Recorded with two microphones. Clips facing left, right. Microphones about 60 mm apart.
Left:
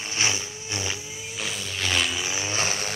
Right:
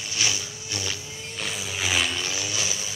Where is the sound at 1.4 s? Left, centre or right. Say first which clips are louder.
Right 1 dB; centre.